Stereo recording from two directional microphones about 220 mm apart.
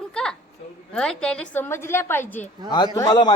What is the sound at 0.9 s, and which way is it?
A woman's voice, 5° left (ahead or behind).